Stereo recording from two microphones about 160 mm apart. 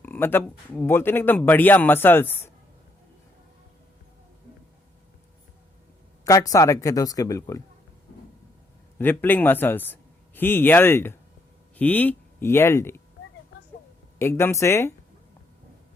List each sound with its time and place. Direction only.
0.0 s a sound: 15° left (ahead or behind)
0.4 s speech: 10° left (ahead or behind)
6.2 s speech: 20° left (ahead or behind)
9.0 s speech: 10° left (ahead or behind)
14.2 s speech: 15° left (ahead or behind)